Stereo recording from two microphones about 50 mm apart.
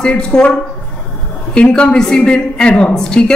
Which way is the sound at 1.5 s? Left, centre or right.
Left.